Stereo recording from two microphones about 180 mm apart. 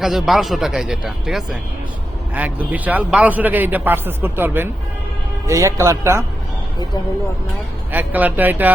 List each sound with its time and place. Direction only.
0.0 s a man's voice: centre (ahead or behind)
7.9 s a man's voice: 10° right (ahead or behind)